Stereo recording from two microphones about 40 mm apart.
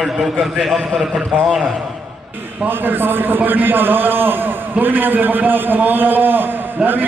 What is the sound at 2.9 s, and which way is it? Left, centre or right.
A man's voice, right.